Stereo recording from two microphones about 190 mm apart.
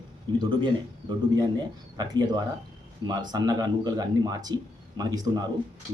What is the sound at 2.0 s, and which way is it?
Speech, 20° right (ahead or behind).